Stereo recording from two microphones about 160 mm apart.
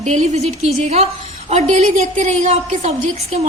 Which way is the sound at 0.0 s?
45° right (ahead or behind).